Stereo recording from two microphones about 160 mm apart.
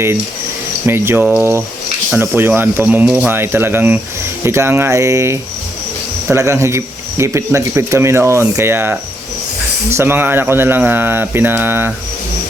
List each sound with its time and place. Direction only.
0.9 s speech: 15° right (ahead or behind)